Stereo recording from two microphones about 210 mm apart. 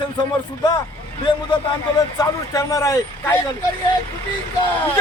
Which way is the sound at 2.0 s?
15° left (ahead or behind).